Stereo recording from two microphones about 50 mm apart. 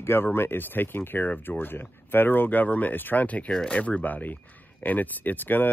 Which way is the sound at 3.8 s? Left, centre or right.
Left.